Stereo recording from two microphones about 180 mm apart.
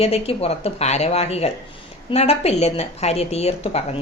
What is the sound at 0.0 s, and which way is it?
A woman's voice, 35° left (ahead or behind).